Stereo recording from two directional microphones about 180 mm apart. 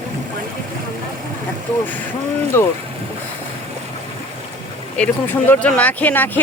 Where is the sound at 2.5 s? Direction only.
15° left (ahead or behind).